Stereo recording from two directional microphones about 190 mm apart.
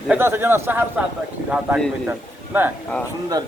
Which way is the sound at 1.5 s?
Centre (ahead or behind).